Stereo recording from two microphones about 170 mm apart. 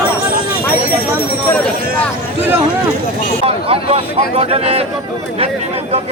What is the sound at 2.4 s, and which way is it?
Speech, 10° right (ahead or behind).